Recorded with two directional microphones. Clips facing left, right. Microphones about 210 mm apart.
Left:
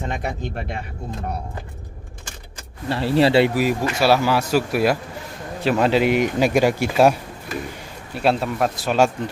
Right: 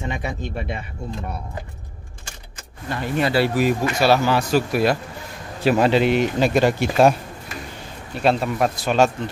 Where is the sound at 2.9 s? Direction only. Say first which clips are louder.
Left 5 dB; 30° left (ahead or behind).